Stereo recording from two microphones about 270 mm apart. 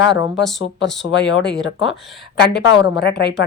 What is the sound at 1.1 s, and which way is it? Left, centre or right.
Speech, left.